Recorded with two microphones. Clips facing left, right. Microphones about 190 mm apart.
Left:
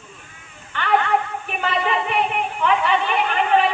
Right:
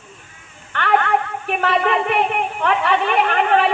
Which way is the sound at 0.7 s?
65° right (ahead or behind).